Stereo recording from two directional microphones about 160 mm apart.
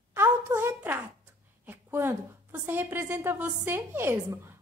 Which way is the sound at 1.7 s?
15° right (ahead or behind).